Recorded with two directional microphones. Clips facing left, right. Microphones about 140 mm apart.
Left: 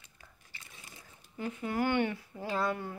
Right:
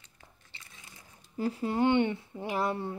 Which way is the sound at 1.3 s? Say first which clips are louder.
Right 4 dB; 35° right (ahead or behind).